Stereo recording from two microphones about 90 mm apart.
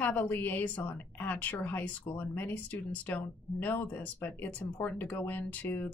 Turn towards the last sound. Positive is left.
turn(degrees=20)  # may be behind; listen again after turning